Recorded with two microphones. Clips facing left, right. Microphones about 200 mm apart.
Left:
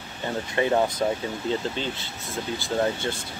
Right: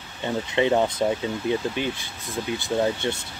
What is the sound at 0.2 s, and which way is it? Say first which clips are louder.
Speech: right 2 dB; 20° right (ahead or behind).